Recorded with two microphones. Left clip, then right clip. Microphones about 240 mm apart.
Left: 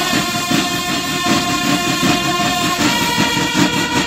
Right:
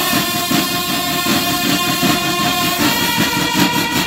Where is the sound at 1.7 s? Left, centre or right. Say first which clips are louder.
Even; centre.